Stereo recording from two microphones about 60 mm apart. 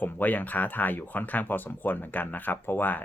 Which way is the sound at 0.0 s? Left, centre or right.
Left.